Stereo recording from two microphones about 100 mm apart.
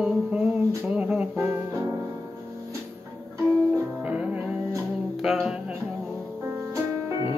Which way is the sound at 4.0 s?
15° right (ahead or behind).